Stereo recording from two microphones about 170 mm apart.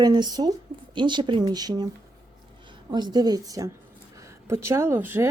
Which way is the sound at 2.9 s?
25° right (ahead or behind).